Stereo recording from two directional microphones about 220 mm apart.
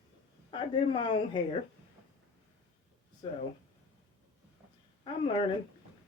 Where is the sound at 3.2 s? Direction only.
20° left (ahead or behind).